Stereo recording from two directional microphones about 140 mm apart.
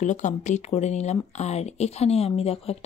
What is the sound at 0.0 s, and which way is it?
Speech, 60° left (ahead or behind).